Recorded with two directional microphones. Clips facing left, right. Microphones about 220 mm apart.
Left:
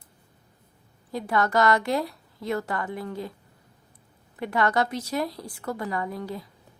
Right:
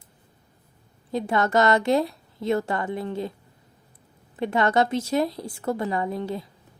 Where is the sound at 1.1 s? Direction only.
25° right (ahead or behind).